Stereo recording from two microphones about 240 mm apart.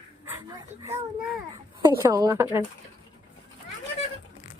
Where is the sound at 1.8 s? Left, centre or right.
Centre.